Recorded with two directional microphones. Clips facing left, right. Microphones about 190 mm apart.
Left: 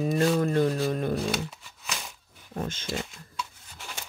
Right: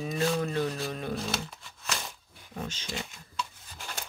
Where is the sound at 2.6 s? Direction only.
50° left (ahead or behind).